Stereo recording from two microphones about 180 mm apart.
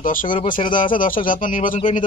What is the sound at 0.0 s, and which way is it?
Speech, 50° left (ahead or behind).